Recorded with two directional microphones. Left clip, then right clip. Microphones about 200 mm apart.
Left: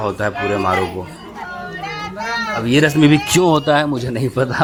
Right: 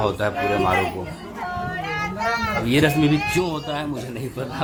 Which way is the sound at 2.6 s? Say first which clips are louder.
Left 5 dB; 20° left (ahead or behind).